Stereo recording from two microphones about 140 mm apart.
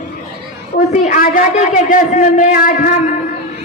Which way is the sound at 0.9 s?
70° left (ahead or behind).